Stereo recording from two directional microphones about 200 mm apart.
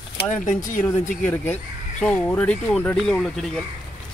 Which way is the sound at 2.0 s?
5° left (ahead or behind).